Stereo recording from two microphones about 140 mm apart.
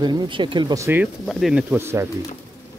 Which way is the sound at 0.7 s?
20° right (ahead or behind).